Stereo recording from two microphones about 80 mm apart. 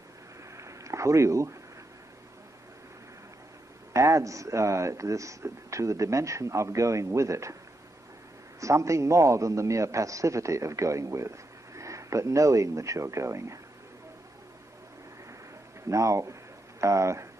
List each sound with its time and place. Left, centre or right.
0.6 s a sound: right
3.9 s a man's voice: right
8.5 s a man's voice: right
15.9 s a man's voice: right